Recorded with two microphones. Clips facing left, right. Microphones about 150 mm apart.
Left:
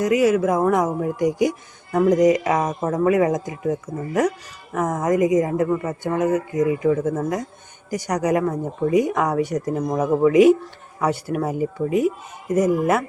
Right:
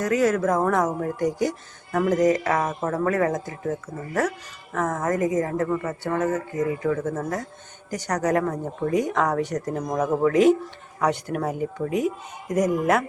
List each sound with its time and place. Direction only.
0.0 s speech: 10° left (ahead or behind)